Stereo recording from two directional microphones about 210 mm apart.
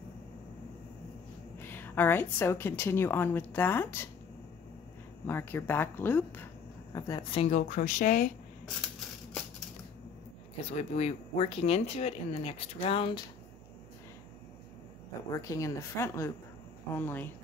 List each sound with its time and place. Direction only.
1.7 s speech: 10° left (ahead or behind)
5.2 s speech: 10° left (ahead or behind); by 8.3 s 40° left (ahead or behind)
10.6 s speech: 30° left (ahead or behind)
15.3 s speech: 15° left (ahead or behind)